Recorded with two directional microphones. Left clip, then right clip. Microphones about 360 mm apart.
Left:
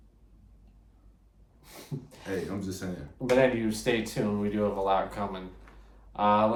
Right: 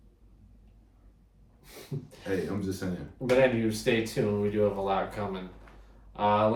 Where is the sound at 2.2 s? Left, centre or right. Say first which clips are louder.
Right 2 dB; centre.